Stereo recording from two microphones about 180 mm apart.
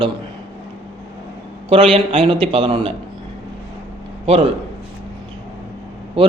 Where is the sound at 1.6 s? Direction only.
30° right (ahead or behind).